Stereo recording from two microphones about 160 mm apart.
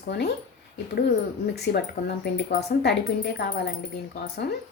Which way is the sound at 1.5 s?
90° left.